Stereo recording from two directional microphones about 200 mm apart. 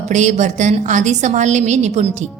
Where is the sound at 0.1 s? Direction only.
35° right (ahead or behind).